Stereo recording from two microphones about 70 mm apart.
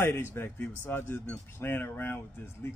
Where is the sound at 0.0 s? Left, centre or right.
Left.